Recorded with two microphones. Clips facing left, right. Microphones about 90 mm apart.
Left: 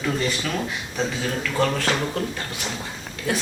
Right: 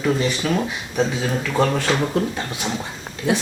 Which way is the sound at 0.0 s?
15° right (ahead or behind).